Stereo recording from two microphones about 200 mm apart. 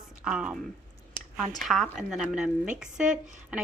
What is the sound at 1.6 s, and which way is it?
Speech, centre (ahead or behind).